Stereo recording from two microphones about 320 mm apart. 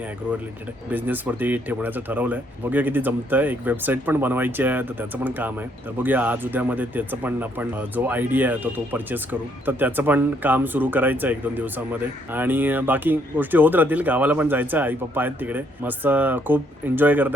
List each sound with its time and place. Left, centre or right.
0.9 s speech: centre